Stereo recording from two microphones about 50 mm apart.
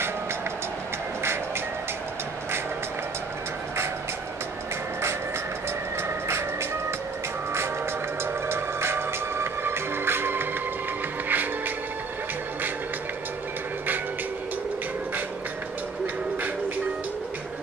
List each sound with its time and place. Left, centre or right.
6.0 s music: right
8.5 s music: right